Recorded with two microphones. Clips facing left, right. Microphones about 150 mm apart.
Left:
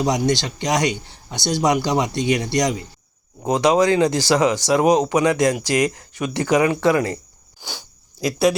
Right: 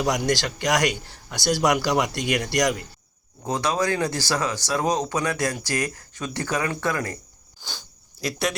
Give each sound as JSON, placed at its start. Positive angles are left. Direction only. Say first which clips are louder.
{"t": 0.0, "sound": "speech", "louder": "left 3 dB", "side_deg": 20}